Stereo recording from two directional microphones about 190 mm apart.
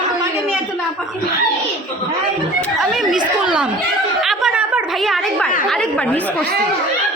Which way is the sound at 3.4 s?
5° right (ahead or behind).